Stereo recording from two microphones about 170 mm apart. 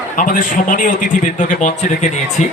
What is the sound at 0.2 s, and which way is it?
A man's voice, 50° left (ahead or behind).